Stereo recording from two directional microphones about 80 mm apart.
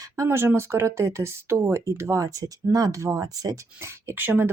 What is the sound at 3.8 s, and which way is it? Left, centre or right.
Speech, right.